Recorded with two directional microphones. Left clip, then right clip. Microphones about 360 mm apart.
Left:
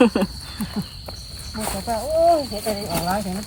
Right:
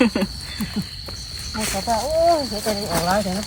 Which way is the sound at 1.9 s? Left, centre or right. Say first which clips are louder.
Even; centre.